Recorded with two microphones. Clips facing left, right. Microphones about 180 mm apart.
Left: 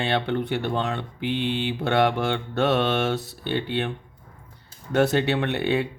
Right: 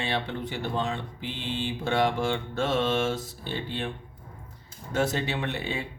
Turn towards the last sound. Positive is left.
turn(degrees=65)  # may be behind; listen again after turning